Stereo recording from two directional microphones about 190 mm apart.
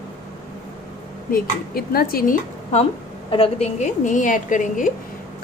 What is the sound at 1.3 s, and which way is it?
Speech, 55° left (ahead or behind).